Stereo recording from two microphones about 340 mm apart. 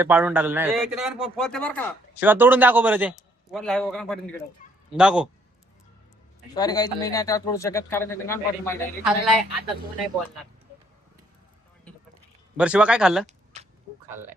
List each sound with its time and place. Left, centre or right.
0.0 s a man's voice: centre
4.6 s fowl: left
4.9 s a man's voice: centre
6.5 s speech: centre
12.5 s a man's voice: centre
13.2 s a sound: centre